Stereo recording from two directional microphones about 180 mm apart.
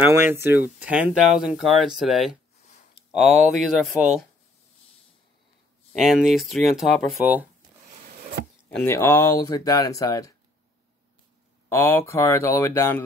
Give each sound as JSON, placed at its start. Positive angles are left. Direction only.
{"t": 0.0, "sound": "speech", "side_deg": -10}
{"t": 5.9, "sound": "speech", "side_deg": 0}
{"t": 8.6, "sound": "speech", "side_deg": 10}
{"t": 11.7, "sound": "speech", "side_deg": 10}